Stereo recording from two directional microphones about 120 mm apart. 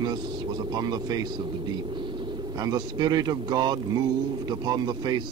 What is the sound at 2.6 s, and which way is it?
Speech, 35° right (ahead or behind).